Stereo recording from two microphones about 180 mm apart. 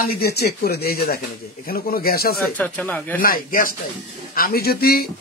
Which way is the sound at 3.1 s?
50° left (ahead or behind).